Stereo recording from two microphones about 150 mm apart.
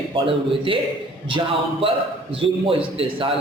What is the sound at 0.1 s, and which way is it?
Speech, 35° right (ahead or behind).